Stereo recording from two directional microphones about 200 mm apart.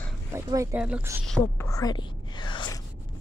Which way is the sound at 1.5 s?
15° left (ahead or behind).